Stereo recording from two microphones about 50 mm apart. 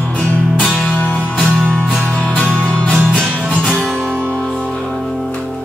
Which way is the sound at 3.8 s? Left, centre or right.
Centre.